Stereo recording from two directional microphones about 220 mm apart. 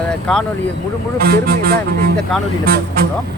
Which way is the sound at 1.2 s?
45° right (ahead or behind).